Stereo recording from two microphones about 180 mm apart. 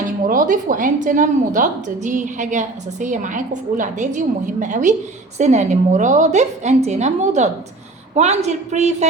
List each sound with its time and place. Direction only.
0.3 s a woman's voice: 50° right (ahead or behind)